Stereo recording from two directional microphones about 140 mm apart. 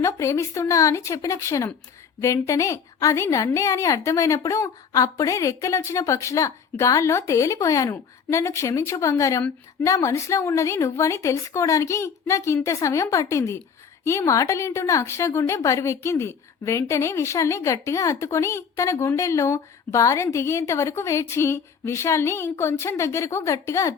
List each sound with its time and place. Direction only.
0.0 s a woman's voice: 20° left (ahead or behind)